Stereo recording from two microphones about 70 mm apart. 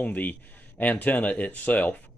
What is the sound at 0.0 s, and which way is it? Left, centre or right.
Speech, left.